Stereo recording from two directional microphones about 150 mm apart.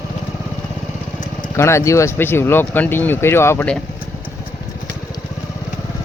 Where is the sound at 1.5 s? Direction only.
15° left (ahead or behind).